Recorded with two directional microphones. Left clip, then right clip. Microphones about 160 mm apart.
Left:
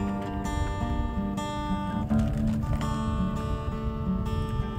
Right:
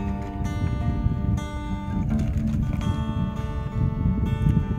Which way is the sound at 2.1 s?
5° right (ahead or behind).